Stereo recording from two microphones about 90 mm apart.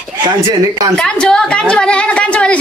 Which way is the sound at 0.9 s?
10° left (ahead or behind).